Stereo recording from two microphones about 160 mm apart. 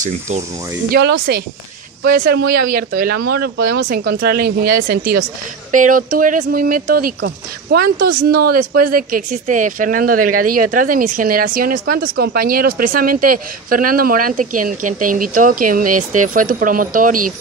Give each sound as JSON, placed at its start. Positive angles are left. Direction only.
{"t": 0.9, "sound": "speech", "side_deg": -75}
{"t": 5.7, "sound": "speech", "side_deg": -55}